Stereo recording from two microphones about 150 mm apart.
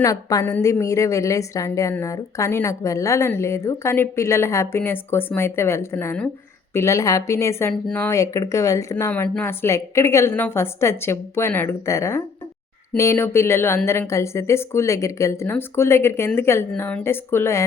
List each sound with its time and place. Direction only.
0.0 s a woman's voice: 25° left (ahead or behind)
7.7 s a woman's voice: 10° left (ahead or behind)